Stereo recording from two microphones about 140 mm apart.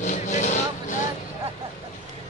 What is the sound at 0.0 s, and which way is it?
Vehicle, 60° left (ahead or behind).